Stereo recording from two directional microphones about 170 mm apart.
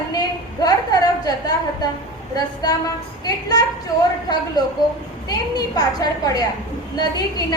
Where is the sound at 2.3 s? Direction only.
20° left (ahead or behind).